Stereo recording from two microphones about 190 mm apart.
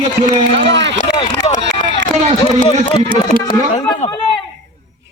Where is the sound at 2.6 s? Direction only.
25° left (ahead or behind).